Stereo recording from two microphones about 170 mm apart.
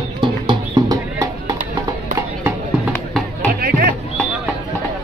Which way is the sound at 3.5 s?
60° right (ahead or behind).